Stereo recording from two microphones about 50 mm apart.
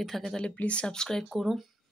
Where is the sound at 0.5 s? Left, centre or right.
Left.